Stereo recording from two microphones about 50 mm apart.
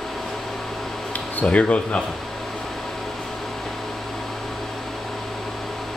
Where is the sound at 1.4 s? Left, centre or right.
Left.